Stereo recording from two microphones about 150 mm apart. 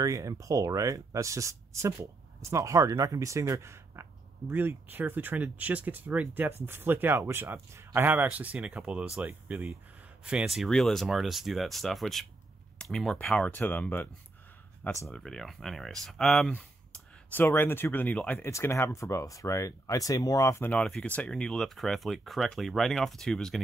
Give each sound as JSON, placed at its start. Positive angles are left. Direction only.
{"t": 0.0, "sound": "speech", "side_deg": -20}
{"t": 15.0, "sound": "speech", "side_deg": 5}